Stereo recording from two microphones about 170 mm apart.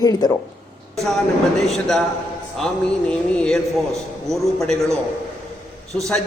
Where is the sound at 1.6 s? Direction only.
Centre (ahead or behind).